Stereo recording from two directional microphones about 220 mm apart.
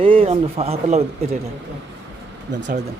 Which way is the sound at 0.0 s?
25° right (ahead or behind).